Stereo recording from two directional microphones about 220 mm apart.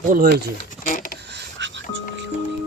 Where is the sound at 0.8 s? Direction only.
35° left (ahead or behind).